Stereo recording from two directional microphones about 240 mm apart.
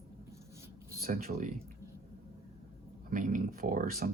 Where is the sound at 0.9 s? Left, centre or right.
Right.